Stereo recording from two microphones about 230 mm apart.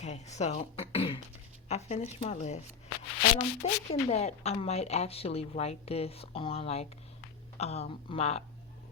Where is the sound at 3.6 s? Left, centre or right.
Left.